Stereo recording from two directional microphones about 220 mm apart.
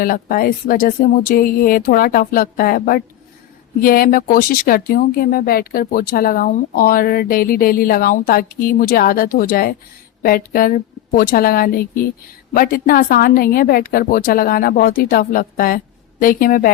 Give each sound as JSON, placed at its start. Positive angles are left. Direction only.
{"t": 0.0, "sound": "speech", "side_deg": 40}